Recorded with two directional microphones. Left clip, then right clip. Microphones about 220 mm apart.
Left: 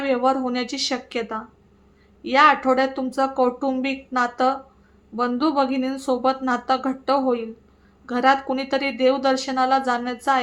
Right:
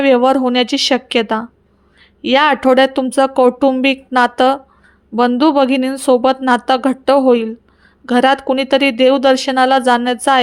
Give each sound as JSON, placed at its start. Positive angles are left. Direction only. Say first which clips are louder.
{"t": 0.0, "sound": "speech", "louder": "right 10 dB", "side_deg": -35}